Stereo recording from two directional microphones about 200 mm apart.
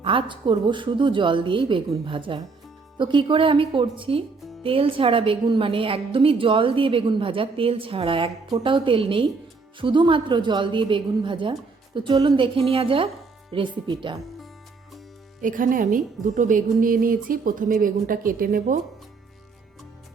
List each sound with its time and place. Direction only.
0.0 s a woman's voice: 25° right (ahead or behind)
15.4 s a woman's voice: 40° right (ahead or behind)